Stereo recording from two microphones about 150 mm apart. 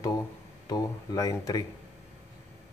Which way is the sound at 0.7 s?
25° left (ahead or behind).